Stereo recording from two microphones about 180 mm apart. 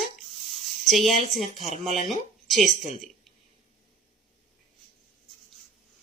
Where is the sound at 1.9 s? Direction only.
45° right (ahead or behind).